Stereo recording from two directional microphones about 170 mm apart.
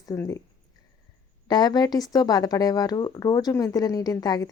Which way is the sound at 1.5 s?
25° left (ahead or behind).